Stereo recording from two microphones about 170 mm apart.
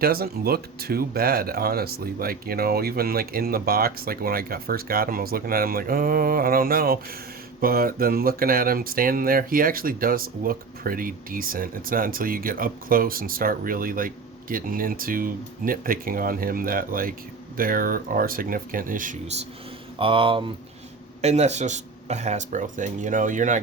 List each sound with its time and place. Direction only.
0.0 s speech: 65° right (ahead or behind)
20.0 s speech: 30° right (ahead or behind); by 23.6 s 50° right (ahead or behind)